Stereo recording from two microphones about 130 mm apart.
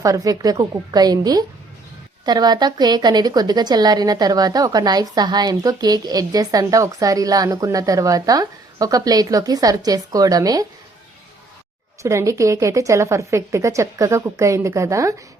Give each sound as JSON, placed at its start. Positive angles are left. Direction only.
{"t": 0.0, "sound": "a woman's voice", "side_deg": -25}
{"t": 12.0, "sound": "a woman's voice", "side_deg": -25}